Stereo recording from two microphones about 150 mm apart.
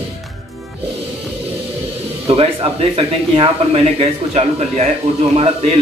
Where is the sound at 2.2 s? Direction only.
40° right (ahead or behind).